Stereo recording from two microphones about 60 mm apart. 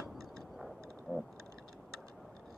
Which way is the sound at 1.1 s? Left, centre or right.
Right.